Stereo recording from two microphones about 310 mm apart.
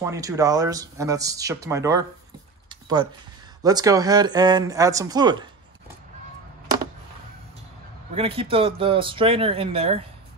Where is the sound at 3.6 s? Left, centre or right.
Centre.